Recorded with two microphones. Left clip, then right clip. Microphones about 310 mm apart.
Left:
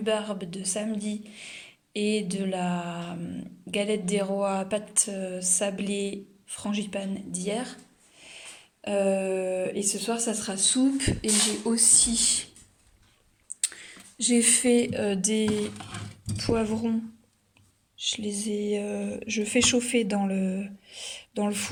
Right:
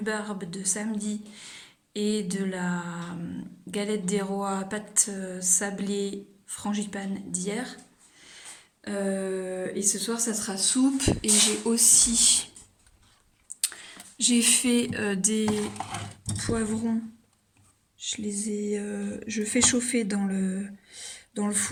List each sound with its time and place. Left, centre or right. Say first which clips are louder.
0.0 s a woman's voice: left 4 dB; centre
8.2 s a sound: left 2 dB; centre
9.2 s a woman's voice: left 4 dB; centre
13.6 s a woman's voice: right 1 dB; centre
17.9 s speech: left 3 dB; centre
19.0 s speech: left 2 dB; left
19.3 s speech: left 1 dB; centre
20.3 s speech: left 2 dB; left
21.3 s a woman's voice: left 1 dB; centre